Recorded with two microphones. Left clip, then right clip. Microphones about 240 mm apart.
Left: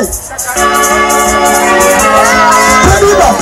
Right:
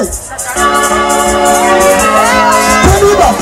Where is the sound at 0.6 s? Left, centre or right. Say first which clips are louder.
Left 1 dB; centre.